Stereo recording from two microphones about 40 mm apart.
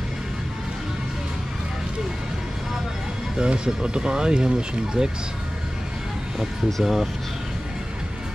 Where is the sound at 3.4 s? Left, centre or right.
Right.